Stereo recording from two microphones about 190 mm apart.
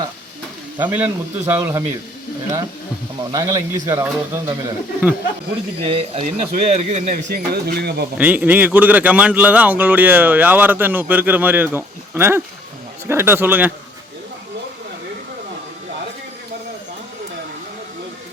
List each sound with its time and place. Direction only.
0.8 s a man's voice: 10° right (ahead or behind)
3.3 s a man's voice: 15° right (ahead or behind)
5.9 s speech: 30° right (ahead or behind); by 8.0 s 60° right (ahead or behind)
8.2 s a man's voice: 10° right (ahead or behind)